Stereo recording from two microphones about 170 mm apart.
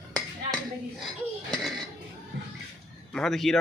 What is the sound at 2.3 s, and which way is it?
Music, 90° right.